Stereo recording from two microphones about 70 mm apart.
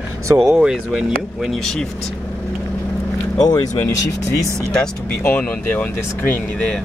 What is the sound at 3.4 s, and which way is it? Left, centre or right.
Speech, left.